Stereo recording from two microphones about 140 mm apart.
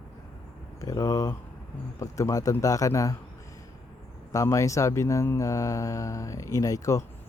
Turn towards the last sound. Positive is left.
turn(degrees=25)  # may be behind; listen again after turning